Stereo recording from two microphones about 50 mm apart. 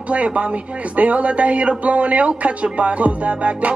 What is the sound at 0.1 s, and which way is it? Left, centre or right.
A man's voice, right.